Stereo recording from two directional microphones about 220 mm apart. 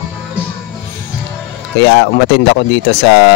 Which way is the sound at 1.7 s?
50° left (ahead or behind).